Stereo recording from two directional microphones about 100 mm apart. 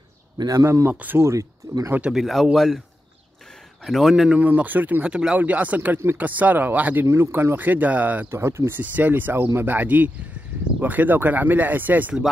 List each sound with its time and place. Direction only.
0.4 s speech: 40° right (ahead or behind)
0.7 s speech: 25° right (ahead or behind)
1.9 s speech: 10° right (ahead or behind)
3.8 s speech: centre (ahead or behind)
8.3 s speech: 25° right (ahead or behind)